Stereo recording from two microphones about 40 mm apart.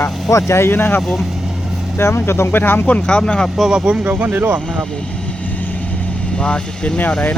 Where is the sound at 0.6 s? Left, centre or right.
Left.